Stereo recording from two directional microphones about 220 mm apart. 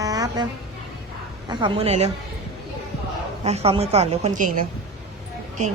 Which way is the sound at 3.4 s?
30° right (ahead or behind).